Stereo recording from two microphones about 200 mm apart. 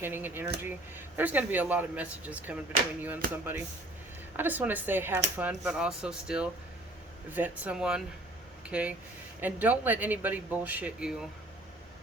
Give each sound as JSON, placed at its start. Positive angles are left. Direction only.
{"t": 0.0, "sound": "speech", "side_deg": -10}
{"t": 3.2, "sound": "speech", "side_deg": -45}
{"t": 4.4, "sound": "speech", "side_deg": -10}